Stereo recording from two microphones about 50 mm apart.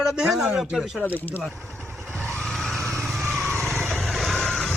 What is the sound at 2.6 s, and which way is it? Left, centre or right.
Vehicle, centre.